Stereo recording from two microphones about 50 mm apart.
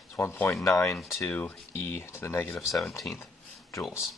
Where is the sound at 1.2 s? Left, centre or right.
Left.